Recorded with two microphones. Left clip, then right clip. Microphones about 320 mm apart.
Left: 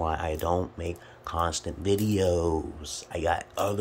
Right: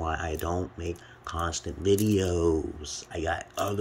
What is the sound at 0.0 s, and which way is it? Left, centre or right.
Speech, centre.